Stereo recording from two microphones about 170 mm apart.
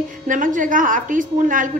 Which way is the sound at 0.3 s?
50° right (ahead or behind).